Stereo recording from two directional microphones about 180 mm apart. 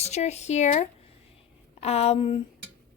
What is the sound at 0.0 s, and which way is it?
A woman's voice, 40° left (ahead or behind).